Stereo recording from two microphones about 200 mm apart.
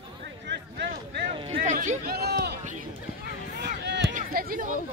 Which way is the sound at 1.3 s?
30° right (ahead or behind).